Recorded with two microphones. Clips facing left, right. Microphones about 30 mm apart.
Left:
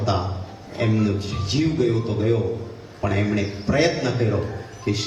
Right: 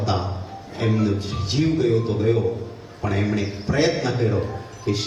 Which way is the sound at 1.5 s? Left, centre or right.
Centre.